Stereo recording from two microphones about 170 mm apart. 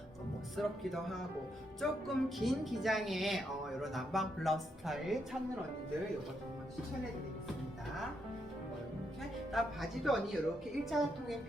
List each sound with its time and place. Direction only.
0.5 s a woman's voice: centre (ahead or behind)
9.5 s a woman's voice: centre (ahead or behind)